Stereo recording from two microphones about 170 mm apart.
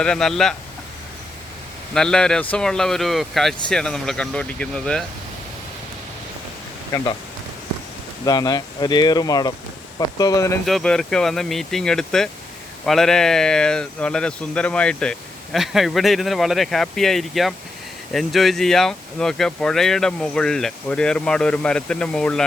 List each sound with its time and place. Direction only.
0.0 s speech: 5° left (ahead or behind)
1.9 s speech: 5° left (ahead or behind)
8.2 s speech: 25° left (ahead or behind)
10.7 s speech: centre (ahead or behind)